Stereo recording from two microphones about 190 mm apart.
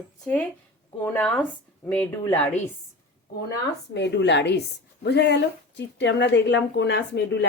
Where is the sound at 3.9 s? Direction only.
65° left (ahead or behind).